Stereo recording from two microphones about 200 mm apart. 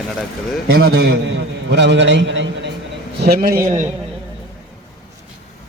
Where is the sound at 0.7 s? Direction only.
50° right (ahead or behind).